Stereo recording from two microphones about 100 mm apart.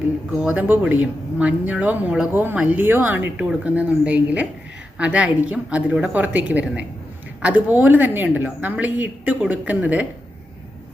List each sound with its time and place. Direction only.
0.3 s a woman's voice: 15° right (ahead or behind)